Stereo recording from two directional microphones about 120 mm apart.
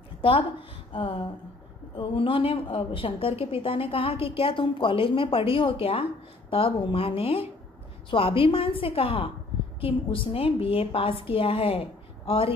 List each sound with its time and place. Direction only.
0.2 s a woman's voice: 50° left (ahead or behind)